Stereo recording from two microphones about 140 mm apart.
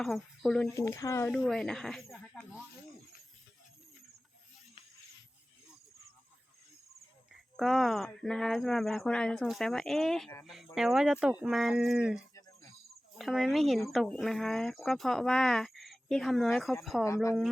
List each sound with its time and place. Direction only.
0.0 s speech: centre (ahead or behind)
0.7 s speech: 25° left (ahead or behind)
1.3 s speech: centre (ahead or behind)
7.5 s speech: centre (ahead or behind)